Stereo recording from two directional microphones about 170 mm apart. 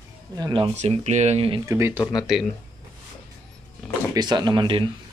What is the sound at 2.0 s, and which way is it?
Speech, 25° left (ahead or behind).